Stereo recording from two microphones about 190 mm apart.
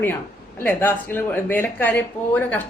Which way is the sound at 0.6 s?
10° left (ahead or behind).